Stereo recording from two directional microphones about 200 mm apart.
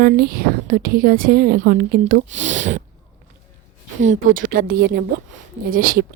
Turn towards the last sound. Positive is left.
turn(degrees=-45)  # may be behind; listen again after turning